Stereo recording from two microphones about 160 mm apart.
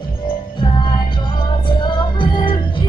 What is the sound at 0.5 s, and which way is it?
Music, 30° left (ahead or behind).